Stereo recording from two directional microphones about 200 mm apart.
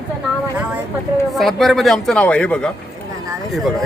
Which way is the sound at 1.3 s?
Centre (ahead or behind).